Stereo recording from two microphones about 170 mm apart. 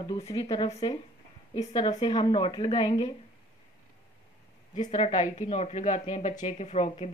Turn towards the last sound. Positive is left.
turn(degrees=40)  # may be behind; listen again after turning